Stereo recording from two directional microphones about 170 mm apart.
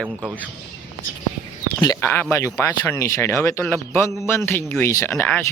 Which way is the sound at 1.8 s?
20° left (ahead or behind).